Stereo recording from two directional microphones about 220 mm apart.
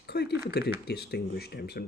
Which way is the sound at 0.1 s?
45° left (ahead or behind).